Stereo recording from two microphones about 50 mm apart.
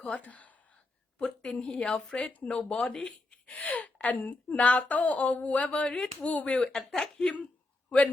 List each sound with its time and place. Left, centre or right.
0.0 s speech: left
1.2 s speech: centre
6.7 s speech: centre
7.9 s a man's voice: left